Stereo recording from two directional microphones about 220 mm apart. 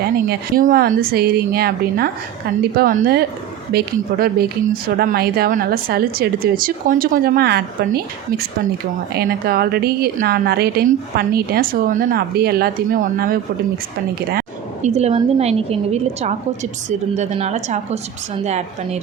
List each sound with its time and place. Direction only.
0.0 s speech: 40° right (ahead or behind)
14.3 s a sound: 30° right (ahead or behind)
15.4 s a woman's voice: 30° right (ahead or behind)